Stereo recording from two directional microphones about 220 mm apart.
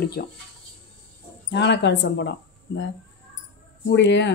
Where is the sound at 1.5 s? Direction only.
55° left (ahead or behind).